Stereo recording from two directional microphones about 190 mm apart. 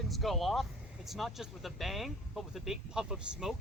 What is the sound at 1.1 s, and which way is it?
Speech, centre (ahead or behind).